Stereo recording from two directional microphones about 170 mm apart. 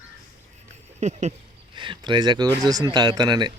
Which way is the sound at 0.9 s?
45° right (ahead or behind).